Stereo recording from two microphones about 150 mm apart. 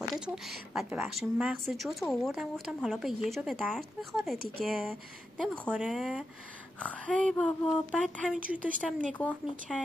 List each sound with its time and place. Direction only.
0.1 s a sound: centre (ahead or behind)
0.8 s speech: 10° right (ahead or behind)
6.8 s speech: 10° left (ahead or behind)
8.5 s speech: 65° right (ahead or behind)
9.0 s speech: 5° left (ahead or behind)